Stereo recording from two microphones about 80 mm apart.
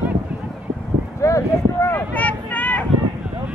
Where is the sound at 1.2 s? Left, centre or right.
Left.